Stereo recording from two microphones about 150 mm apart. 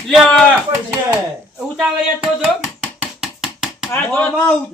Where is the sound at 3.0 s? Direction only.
5° right (ahead or behind).